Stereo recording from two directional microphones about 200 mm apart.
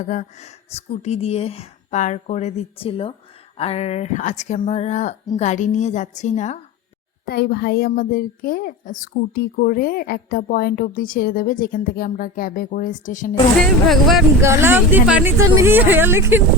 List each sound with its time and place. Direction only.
0.0 s speech: 35° left (ahead or behind)
7.3 s a child's voice: 50° left (ahead or behind)
13.8 s speech: centre (ahead or behind)
14.4 s speech: 15° right (ahead or behind)